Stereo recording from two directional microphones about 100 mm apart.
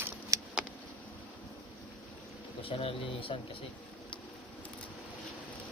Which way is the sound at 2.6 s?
70° left (ahead or behind).